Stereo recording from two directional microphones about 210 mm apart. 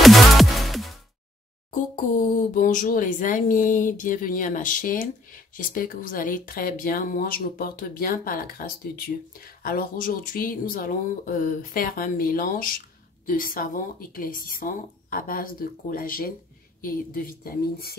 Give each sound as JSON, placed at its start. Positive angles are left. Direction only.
{"t": 0.0, "sound": "music", "side_deg": 0}
{"t": 2.5, "sound": "speech", "side_deg": 40}